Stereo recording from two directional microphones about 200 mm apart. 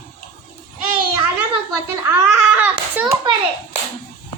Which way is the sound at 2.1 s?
10° right (ahead or behind).